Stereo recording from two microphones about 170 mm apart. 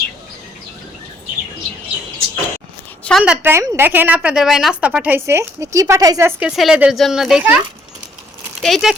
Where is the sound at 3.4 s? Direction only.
15° right (ahead or behind).